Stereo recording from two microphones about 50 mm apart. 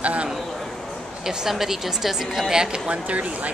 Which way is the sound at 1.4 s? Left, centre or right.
Centre.